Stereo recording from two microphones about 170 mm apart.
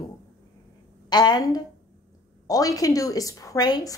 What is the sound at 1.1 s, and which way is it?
Speech, 25° left (ahead or behind).